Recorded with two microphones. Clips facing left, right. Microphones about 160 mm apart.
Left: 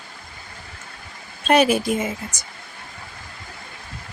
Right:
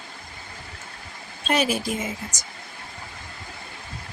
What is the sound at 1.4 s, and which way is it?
Speech, 60° left (ahead or behind).